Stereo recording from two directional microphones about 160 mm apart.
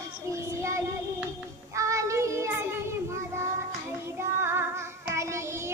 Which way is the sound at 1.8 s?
20° right (ahead or behind).